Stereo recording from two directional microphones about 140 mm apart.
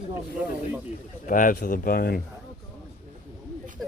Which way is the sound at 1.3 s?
75° left (ahead or behind).